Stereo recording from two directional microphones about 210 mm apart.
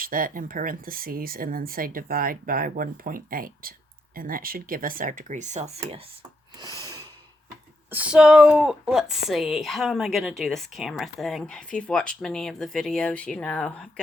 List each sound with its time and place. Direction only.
0.0 s speech: 40° right (ahead or behind)
6.6 s a sound: 15° right (ahead or behind)
7.9 s speech: 5° right (ahead or behind)